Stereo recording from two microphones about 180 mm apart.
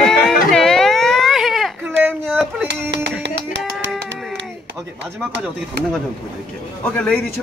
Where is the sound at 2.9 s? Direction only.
75° right (ahead or behind).